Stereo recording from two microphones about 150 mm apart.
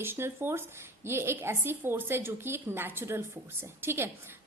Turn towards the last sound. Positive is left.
turn(degrees=-15)  # may be behind; listen again after turning